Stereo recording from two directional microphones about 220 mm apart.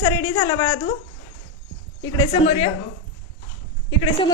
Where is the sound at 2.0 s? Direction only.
20° left (ahead or behind).